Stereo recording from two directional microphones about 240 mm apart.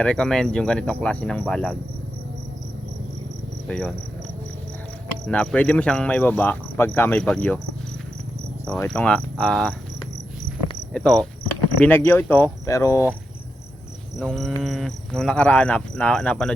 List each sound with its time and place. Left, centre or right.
0.0 s cricket: centre
3.7 s cricket: centre
5.2 s cricket: centre
8.6 s cricket: centre
10.9 s cricket: centre
11.8 s speech: centre
14.2 s cricket: centre